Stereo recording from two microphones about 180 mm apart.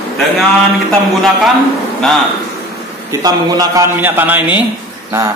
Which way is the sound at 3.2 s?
20° right (ahead or behind).